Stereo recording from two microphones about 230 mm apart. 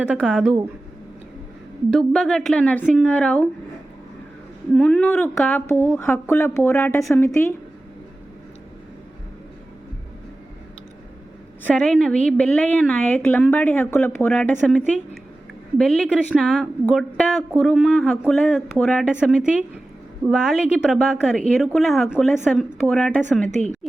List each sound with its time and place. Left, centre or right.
0.0 s a woman's voice: centre
1.9 s a woman's voice: centre
4.7 s a woman's voice: centre
11.6 s a woman's voice: centre
23.5 s a woman's voice: right